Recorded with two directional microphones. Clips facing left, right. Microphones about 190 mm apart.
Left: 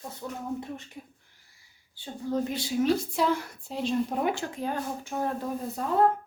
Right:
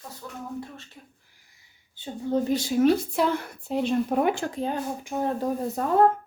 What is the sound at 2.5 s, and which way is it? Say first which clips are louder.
Speech: right 6 dB; 50° right (ahead or behind).